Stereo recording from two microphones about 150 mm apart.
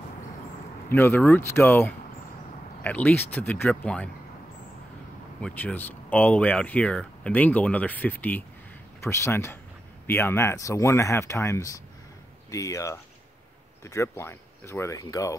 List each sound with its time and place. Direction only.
0.9 s speech: 15° left (ahead or behind)
5.4 s speech: 10° left (ahead or behind)